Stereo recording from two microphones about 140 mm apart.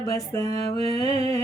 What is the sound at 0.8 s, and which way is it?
Music, 45° right (ahead or behind).